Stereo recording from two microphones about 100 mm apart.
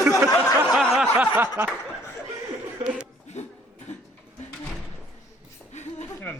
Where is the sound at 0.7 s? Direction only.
Centre (ahead or behind).